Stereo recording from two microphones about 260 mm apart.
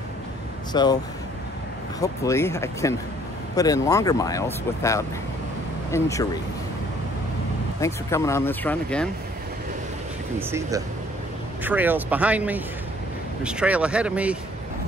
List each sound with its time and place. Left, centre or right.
0.7 s speech: centre
2.0 s speech: centre
7.8 s speech: centre
11.6 s speech: centre